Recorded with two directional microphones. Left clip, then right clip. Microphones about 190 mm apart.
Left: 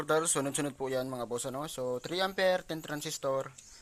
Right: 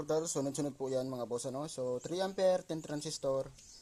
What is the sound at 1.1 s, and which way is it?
Speech, 20° left (ahead or behind).